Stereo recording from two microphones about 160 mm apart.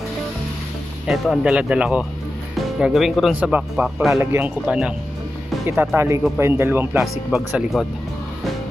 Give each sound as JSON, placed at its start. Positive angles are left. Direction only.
{"t": 1.0, "sound": "speech", "side_deg": 0}
{"t": 5.9, "sound": "speech", "side_deg": -15}